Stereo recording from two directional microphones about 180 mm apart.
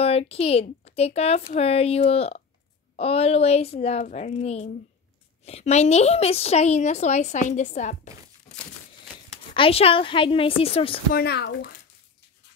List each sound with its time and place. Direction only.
0.0 s a woman's voice: 35° left (ahead or behind)
9.5 s a woman's voice: 30° left (ahead or behind)
11.1 s speech: 65° left (ahead or behind)